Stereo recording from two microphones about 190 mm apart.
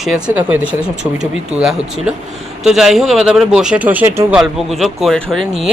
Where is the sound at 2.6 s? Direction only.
Centre (ahead or behind).